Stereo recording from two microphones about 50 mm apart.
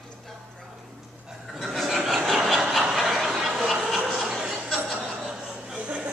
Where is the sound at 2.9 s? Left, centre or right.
Centre.